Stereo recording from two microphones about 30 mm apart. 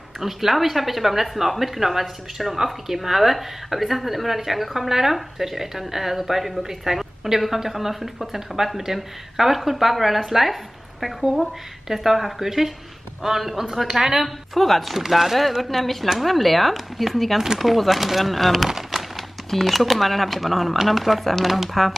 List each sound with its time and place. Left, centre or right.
0.2 s a woman's voice: centre
14.5 s speech: centre
15.0 s a woman's voice: centre
15.6 s speech: centre
18.7 s a sound: centre
19.5 s speech: centre